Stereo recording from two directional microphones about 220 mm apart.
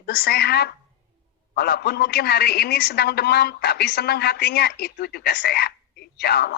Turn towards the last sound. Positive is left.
turn(degrees=45)  # may be behind; listen again after turning